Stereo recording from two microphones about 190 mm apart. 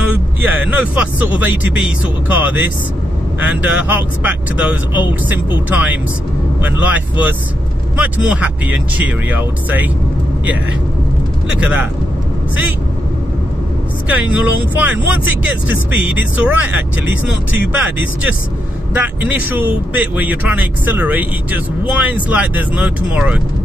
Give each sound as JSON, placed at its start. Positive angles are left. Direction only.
{"t": 0.5, "sound": "speech", "side_deg": -10}
{"t": 11.4, "sound": "speech", "side_deg": -5}
{"t": 14.0, "sound": "speech", "side_deg": -5}
{"t": 15.4, "sound": "speech", "side_deg": -10}
{"t": 18.9, "sound": "speech", "side_deg": -10}